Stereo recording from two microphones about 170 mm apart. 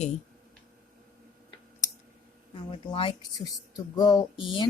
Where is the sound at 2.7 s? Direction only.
30° left (ahead or behind).